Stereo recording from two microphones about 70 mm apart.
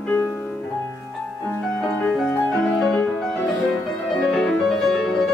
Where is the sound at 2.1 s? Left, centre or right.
Centre.